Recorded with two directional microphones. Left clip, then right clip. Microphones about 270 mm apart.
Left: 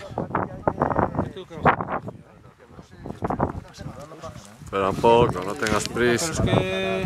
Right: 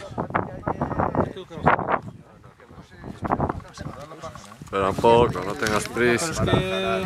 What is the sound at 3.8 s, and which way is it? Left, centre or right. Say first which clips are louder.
Speech: right 1 dB; centre.